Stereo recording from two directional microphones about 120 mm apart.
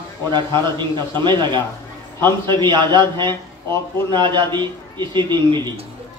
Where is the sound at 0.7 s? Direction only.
40° right (ahead or behind).